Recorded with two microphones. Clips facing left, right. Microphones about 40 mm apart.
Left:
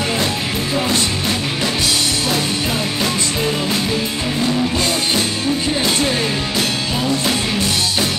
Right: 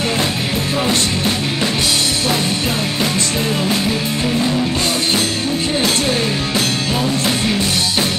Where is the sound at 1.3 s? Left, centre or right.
Centre.